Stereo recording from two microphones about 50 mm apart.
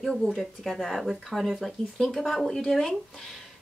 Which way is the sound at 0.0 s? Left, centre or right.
Centre.